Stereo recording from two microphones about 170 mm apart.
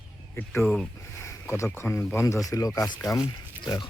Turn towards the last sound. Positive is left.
turn(degrees=25)  # may be behind; listen again after turning